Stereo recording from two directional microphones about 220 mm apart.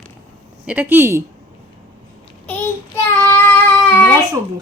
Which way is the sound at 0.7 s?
10° right (ahead or behind).